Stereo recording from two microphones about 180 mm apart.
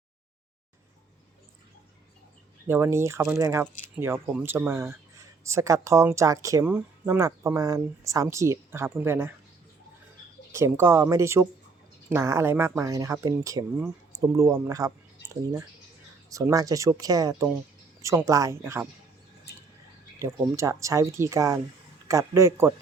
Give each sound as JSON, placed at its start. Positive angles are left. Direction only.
{"t": 2.6, "sound": "speech", "side_deg": -15}
{"t": 10.5, "sound": "speech", "side_deg": -15}
{"t": 16.3, "sound": "speech", "side_deg": -15}
{"t": 20.1, "sound": "speech", "side_deg": -15}